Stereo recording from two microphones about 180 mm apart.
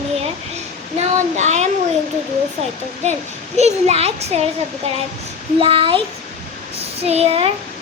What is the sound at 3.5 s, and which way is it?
Speech, 35° right (ahead or behind).